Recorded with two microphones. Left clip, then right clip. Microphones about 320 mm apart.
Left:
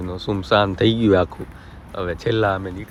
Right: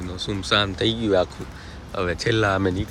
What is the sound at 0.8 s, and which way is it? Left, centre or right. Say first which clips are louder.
Speech: left 4 dB; left.